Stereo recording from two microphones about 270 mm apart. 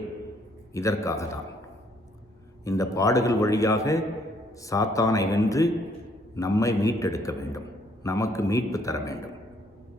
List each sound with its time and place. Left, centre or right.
0.7 s a man's voice: centre
2.6 s a man's voice: centre